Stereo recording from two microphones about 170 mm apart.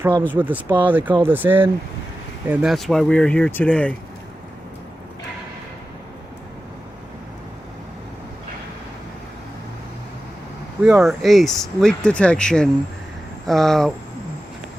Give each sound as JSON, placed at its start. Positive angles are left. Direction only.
{"t": 0.0, "sound": "speech", "side_deg": -10}
{"t": 10.8, "sound": "speech", "side_deg": -5}